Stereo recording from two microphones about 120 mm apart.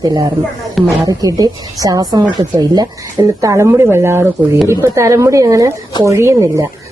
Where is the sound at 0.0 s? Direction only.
30° right (ahead or behind).